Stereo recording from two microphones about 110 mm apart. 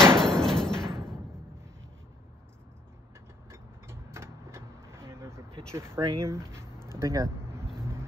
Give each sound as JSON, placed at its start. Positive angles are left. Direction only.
{"t": 0.0, "sound": "hammer", "side_deg": 5}
{"t": 3.4, "sound": "vehicle", "side_deg": -25}
{"t": 5.7, "sound": "speech", "side_deg": -25}